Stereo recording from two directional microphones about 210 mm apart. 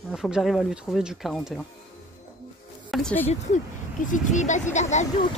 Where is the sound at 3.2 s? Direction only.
35° left (ahead or behind).